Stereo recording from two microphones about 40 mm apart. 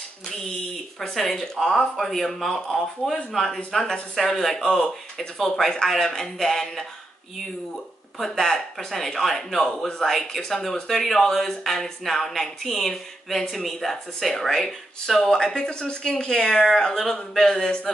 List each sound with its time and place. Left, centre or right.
0.9 s speech: centre
8.2 s speech: centre